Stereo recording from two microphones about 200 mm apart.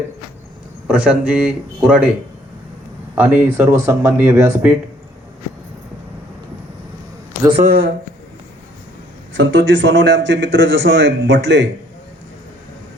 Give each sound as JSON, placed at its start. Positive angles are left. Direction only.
{"t": 0.9, "sound": "speech", "side_deg": -5}
{"t": 3.2, "sound": "speech", "side_deg": -10}
{"t": 7.5, "sound": "speech", "side_deg": -45}
{"t": 9.3, "sound": "speech", "side_deg": -65}